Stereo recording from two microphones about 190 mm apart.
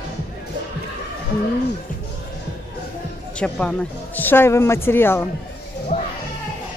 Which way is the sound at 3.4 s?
5° left (ahead or behind).